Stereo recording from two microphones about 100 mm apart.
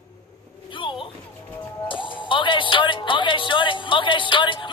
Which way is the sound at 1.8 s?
55° left (ahead or behind).